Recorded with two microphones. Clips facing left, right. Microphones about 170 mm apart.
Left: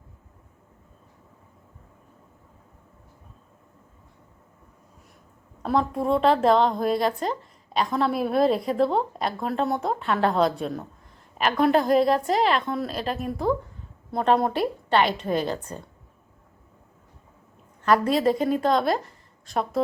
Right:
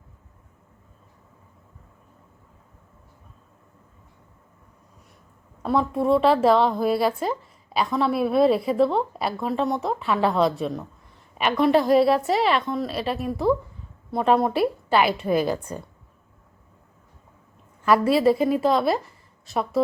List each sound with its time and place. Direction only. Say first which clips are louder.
5.6 s a woman's voice: right 2 dB; centre (ahead or behind)
11.7 s a woman's voice: right 3 dB; 45° left (ahead or behind)
12.0 s a woman's voice: right 2 dB; 5° right (ahead or behind)
12.3 s a woman's voice: right 1 dB; 45° left (ahead or behind)
12.5 s a woman's voice: right 2 dB; centre (ahead or behind)
17.8 s a woman's voice: right 2 dB; 5° right (ahead or behind)